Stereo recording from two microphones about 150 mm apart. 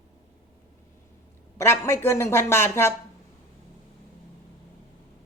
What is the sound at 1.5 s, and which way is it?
Speech, 15° left (ahead or behind).